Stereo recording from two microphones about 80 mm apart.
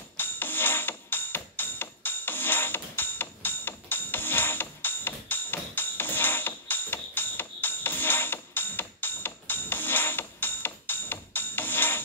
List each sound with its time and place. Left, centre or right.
0.2 s music: left